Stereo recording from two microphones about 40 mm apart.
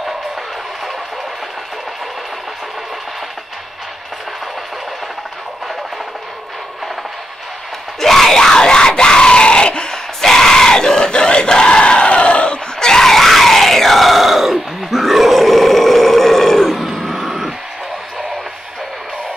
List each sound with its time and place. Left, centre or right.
8.0 s screaming: centre; by 9.9 s left
10.2 s screaming: centre; by 12.5 s left
12.7 s screaming: centre
16.8 s a sound: centre